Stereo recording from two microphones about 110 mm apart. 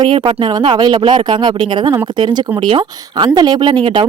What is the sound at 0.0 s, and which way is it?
Speech, 45° right (ahead or behind).